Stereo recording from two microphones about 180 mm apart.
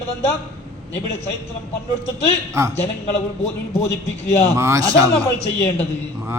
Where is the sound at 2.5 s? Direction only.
15° right (ahead or behind).